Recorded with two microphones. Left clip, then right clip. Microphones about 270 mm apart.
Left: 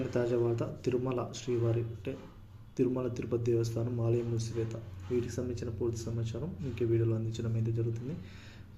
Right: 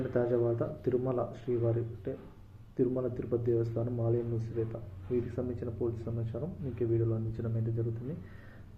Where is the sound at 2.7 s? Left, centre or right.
Centre.